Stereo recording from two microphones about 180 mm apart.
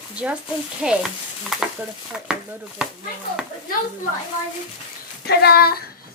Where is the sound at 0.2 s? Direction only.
5° right (ahead or behind).